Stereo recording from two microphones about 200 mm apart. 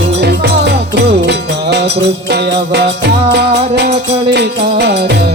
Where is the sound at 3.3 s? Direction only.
55° right (ahead or behind).